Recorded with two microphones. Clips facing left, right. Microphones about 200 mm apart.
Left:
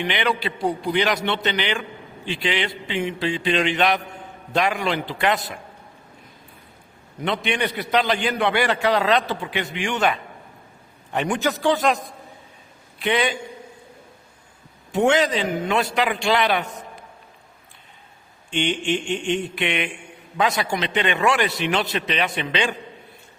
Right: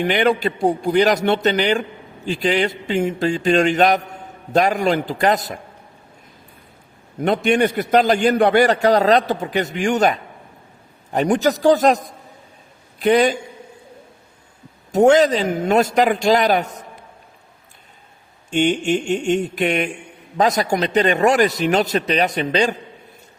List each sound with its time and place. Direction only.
0.0 s a man's voice: 45° right (ahead or behind)
7.2 s a man's voice: 45° right (ahead or behind)
13.0 s a man's voice: 40° right (ahead or behind)
14.9 s a man's voice: 40° right (ahead or behind)
18.5 s a man's voice: 45° right (ahead or behind)